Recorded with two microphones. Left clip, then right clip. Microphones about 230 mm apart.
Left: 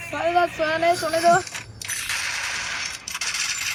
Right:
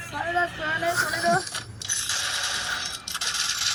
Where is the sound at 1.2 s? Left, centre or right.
Centre.